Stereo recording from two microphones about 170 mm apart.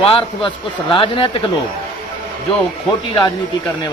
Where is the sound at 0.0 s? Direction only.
30° left (ahead or behind).